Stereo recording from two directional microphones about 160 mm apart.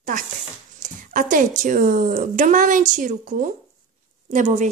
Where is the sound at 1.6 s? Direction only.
55° right (ahead or behind).